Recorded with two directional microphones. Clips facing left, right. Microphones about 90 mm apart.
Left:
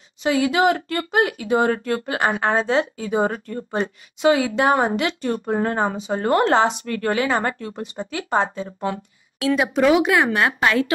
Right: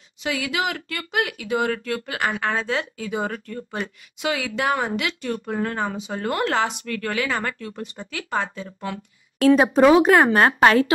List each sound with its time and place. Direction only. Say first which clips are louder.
0.2 s speech: left 7 dB; 30° left (ahead or behind)
9.6 s speech: even; 35° right (ahead or behind)